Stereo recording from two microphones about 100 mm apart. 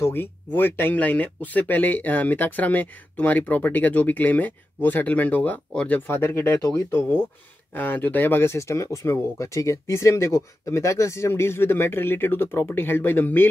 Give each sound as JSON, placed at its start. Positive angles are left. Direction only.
{"t": 0.0, "sound": "speech", "side_deg": 20}